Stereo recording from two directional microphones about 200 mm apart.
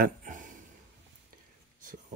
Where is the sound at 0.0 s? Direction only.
40° right (ahead or behind).